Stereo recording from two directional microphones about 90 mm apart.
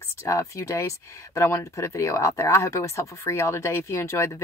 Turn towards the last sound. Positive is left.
turn(degrees=30)  # may be behind; listen again after turning